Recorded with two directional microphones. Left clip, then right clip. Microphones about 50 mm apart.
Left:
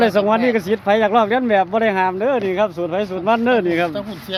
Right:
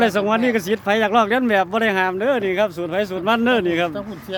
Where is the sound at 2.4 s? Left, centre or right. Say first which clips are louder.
Left 1 dB; right.